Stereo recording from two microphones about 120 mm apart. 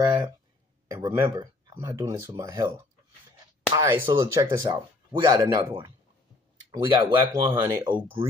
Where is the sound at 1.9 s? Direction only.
20° right (ahead or behind).